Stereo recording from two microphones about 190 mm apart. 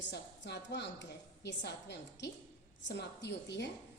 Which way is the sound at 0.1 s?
65° left (ahead or behind).